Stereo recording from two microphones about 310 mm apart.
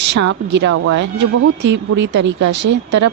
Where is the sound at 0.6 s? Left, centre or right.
Right.